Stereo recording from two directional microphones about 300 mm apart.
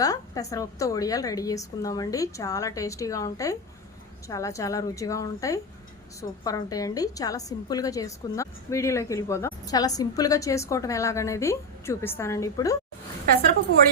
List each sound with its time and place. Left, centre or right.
0.0 s a woman's voice: centre
13.3 s a woman's voice: right